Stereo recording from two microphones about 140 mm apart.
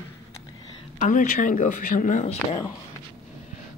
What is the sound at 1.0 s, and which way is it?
Speech, 70° left (ahead or behind).